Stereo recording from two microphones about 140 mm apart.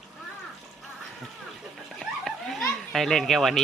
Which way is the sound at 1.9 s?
Centre (ahead or behind).